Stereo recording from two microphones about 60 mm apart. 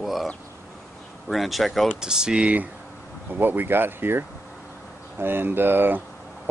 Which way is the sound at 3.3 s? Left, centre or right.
Right.